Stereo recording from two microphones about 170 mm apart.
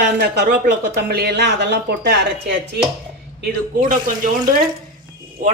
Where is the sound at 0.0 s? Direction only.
80° right.